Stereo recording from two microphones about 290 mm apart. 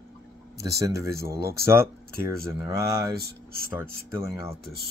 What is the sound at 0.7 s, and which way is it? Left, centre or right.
Speech, centre.